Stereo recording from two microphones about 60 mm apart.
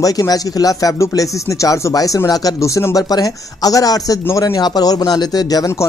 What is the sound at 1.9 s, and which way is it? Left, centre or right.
A man's voice, left.